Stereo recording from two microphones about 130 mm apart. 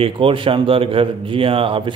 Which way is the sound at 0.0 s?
40° right (ahead or behind).